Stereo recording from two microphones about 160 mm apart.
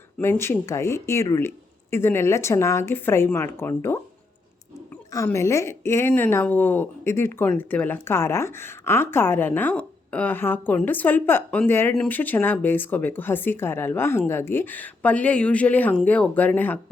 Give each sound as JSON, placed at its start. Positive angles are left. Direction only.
{"t": 0.2, "sound": "a woman's voice", "side_deg": 15}
{"t": 5.1, "sound": "a woman's voice", "side_deg": 20}